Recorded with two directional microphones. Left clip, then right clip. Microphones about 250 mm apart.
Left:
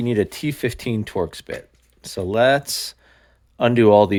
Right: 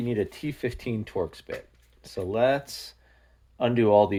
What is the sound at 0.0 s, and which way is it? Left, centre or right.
Speech, left.